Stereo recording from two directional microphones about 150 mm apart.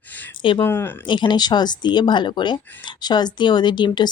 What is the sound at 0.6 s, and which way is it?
Speech, 15° left (ahead or behind).